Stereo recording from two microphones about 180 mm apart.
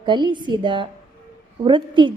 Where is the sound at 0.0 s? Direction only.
25° right (ahead or behind).